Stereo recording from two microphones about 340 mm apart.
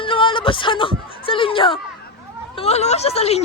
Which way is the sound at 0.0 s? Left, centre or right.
Centre.